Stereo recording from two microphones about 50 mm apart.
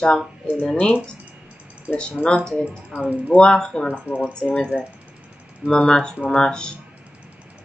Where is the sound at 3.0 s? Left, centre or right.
Right.